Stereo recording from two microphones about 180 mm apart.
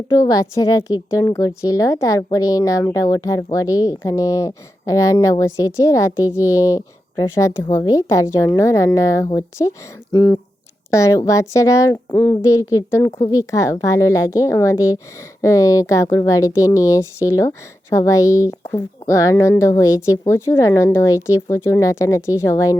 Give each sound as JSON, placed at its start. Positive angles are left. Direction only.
{"t": 0.2, "sound": "a woman's voice", "side_deg": 20}